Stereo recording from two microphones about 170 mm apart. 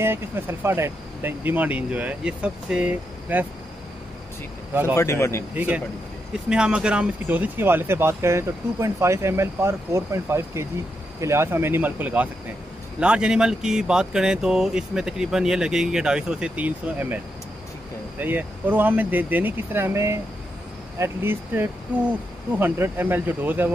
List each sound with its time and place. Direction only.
0.0 s speech: 15° right (ahead or behind)
4.9 s speech: 15° left (ahead or behind)
5.5 s speech: 10° right (ahead or behind)